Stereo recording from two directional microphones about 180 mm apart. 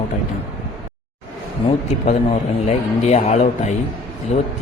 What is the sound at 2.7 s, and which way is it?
A man's voice, 40° left (ahead or behind).